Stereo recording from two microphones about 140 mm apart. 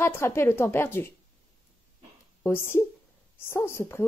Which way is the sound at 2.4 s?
15° left (ahead or behind).